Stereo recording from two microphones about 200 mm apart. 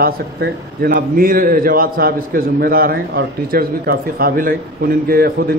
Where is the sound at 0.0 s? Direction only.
50° right (ahead or behind).